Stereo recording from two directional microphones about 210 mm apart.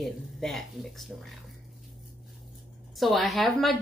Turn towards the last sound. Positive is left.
turn(degrees=0)  # may be behind; listen again after turning